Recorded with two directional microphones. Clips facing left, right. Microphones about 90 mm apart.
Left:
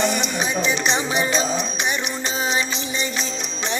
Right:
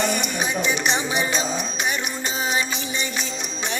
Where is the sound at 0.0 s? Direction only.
20° left (ahead or behind).